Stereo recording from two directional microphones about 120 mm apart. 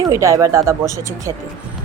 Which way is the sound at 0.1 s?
25° right (ahead or behind).